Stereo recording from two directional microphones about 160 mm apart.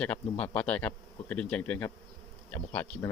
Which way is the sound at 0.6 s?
10° left (ahead or behind).